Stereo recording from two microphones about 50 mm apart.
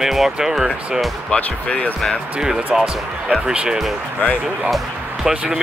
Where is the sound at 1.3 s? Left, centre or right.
Left.